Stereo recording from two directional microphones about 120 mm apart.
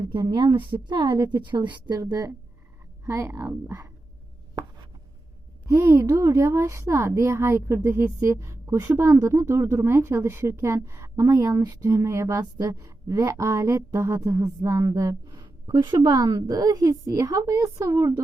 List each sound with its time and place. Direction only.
0.1 s a woman's voice: 40° right (ahead or behind)
2.0 s speech: 30° right (ahead or behind)
5.6 s speech: 25° right (ahead or behind)